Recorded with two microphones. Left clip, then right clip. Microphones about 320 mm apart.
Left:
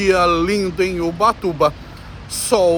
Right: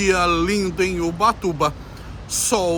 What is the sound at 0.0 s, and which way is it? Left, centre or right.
Speech, centre.